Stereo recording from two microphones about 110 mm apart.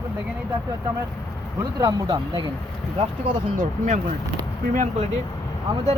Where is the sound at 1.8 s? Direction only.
35° right (ahead or behind).